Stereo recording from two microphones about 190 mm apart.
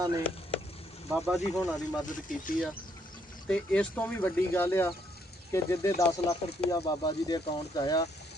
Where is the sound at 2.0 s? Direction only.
45° left (ahead or behind).